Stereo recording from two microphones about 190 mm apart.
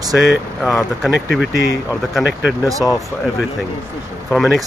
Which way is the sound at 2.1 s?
5° right (ahead or behind).